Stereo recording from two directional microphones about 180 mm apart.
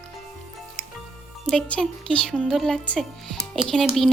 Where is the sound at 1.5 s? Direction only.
5° left (ahead or behind).